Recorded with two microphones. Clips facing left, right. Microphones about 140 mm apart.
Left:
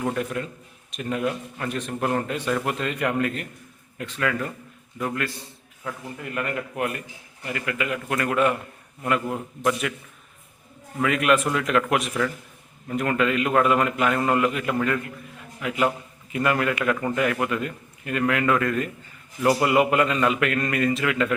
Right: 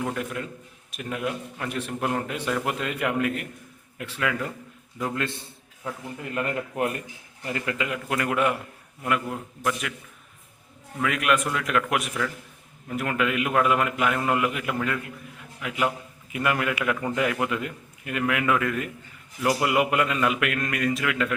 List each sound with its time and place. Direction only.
0.0 s a man's voice: centre (ahead or behind); by 7.9 s 20° right (ahead or behind)
7.9 s a man's voice: 10° right (ahead or behind)
9.0 s a man's voice: 5° right (ahead or behind)
11.0 s a man's voice: centre (ahead or behind)